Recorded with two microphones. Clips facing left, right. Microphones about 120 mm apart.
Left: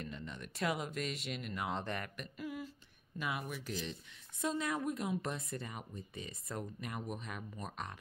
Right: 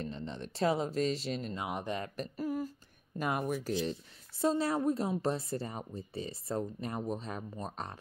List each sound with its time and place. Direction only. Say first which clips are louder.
0.0 s speech: right 6 dB; 30° right (ahead or behind)
1.6 s speech: right 3 dB; 15° right (ahead or behind)
2.1 s humming: right 8 dB; 40° right (ahead or behind)
3.2 s speech: right 7 dB; 45° right (ahead or behind)